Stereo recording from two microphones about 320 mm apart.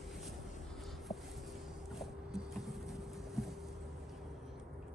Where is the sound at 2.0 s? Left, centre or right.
Centre.